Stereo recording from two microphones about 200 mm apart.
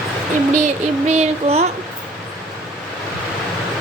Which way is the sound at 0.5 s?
35° right (ahead or behind).